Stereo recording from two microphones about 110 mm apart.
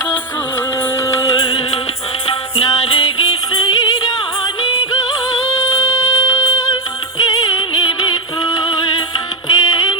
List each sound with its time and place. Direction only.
0.8 s music: 25° left (ahead or behind)
1.4 s music: 50° left (ahead or behind)